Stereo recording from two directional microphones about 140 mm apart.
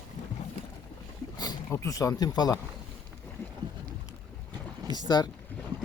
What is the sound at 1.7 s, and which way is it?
Speech, 25° left (ahead or behind).